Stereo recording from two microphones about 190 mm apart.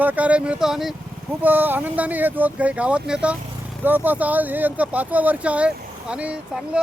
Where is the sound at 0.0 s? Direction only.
10° right (ahead or behind).